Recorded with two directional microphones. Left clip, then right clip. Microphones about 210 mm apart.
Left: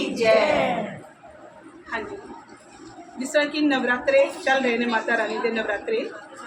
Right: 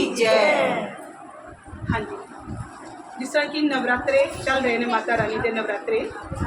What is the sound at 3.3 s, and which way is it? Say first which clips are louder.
A man's voice: left 1 dB; 10° left (ahead or behind).